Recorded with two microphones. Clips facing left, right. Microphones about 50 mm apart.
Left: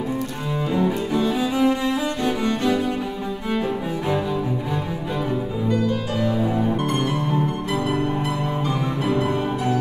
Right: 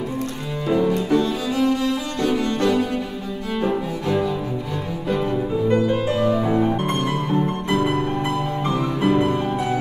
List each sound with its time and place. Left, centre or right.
0.7 s cello: centre
5.7 s music: right